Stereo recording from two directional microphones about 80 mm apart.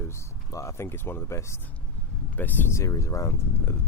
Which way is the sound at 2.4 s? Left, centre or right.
Left.